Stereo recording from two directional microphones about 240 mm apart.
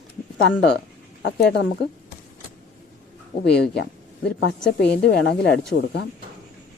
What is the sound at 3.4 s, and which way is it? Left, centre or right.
A woman's voice, left.